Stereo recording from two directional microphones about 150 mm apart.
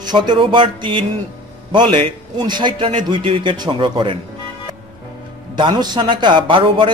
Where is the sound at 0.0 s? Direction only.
30° right (ahead or behind).